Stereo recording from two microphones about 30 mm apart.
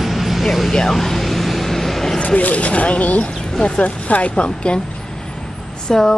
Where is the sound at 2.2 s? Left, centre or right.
Left.